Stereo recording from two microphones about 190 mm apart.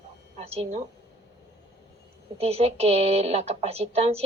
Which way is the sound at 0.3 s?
30° right (ahead or behind).